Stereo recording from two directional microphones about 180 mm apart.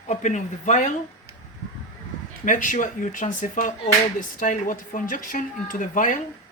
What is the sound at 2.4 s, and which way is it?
A woman's voice, 45° left (ahead or behind).